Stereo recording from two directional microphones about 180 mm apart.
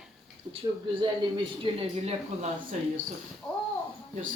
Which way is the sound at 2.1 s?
40° right (ahead or behind).